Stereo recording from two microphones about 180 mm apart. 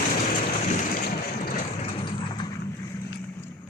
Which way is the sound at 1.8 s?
30° left (ahead or behind).